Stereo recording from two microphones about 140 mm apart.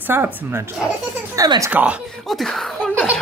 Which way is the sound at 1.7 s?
10° right (ahead or behind).